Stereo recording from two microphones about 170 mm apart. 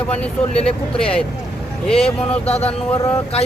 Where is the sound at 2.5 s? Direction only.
35° left (ahead or behind).